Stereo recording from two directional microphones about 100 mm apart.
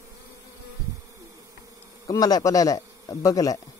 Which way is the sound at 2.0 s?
40° left (ahead or behind).